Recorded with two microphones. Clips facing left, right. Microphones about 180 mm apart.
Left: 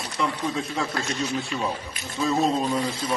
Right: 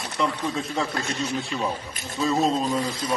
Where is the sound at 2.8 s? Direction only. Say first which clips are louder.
Left 1 dB; 25° left (ahead or behind).